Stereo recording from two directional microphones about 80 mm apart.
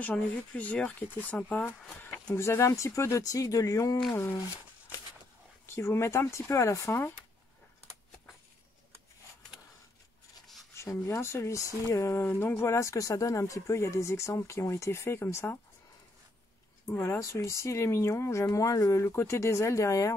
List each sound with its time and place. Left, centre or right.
0.0 s speech: centre
2.0 s a sound: centre
2.3 s speech: left
4.1 s speech: left
5.7 s speech: left
10.4 s a sound: centre
10.8 s speech: left
16.8 s speech: left